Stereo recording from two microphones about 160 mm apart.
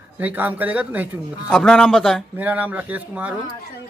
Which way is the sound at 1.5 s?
5° left (ahead or behind).